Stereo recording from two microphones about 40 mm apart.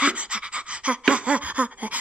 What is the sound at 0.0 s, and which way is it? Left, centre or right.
Pant, right.